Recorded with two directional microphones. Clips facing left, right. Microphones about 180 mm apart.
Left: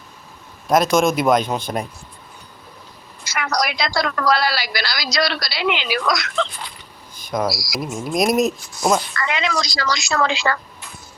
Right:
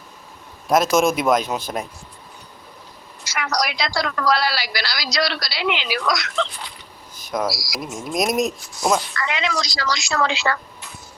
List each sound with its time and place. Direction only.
0.7 s speech: 5° right (ahead or behind)
3.2 s a woman's voice: 55° left (ahead or behind)
7.3 s speech: 5° right (ahead or behind)
9.0 s a woman's voice: 50° left (ahead or behind)